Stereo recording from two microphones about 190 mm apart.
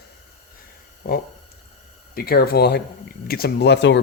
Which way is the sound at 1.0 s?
55° left (ahead or behind).